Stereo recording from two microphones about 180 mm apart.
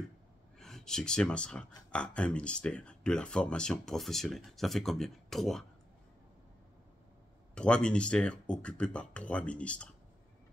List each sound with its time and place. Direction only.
0.6 s speech: centre (ahead or behind)
7.5 s speech: 5° left (ahead or behind)